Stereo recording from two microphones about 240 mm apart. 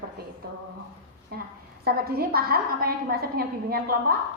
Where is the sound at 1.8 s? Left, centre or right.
Right.